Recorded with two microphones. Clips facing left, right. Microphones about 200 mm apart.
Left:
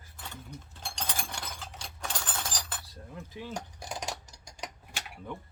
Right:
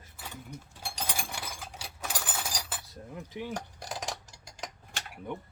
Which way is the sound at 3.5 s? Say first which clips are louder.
Right 1 dB; centre (ahead or behind).